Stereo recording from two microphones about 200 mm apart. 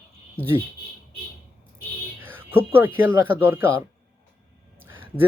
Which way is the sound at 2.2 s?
10° right (ahead or behind).